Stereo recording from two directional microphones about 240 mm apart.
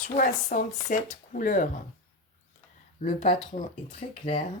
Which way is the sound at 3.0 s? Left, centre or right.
Left.